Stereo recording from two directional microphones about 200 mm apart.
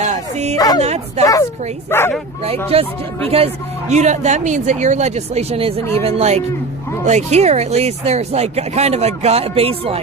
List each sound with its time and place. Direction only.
0.0 s dog: 35° right (ahead or behind)
0.8 s speech: 30° right (ahead or behind)
1.2 s a woman's voice: 15° left (ahead or behind)
2.7 s speech: 30° right (ahead or behind)